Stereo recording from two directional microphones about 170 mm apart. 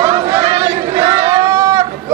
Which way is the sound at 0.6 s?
25° right (ahead or behind).